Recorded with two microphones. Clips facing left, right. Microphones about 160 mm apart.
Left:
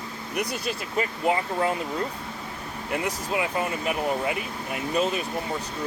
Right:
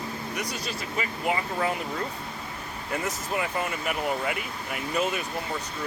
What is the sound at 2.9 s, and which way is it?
Speech, 20° left (ahead or behind).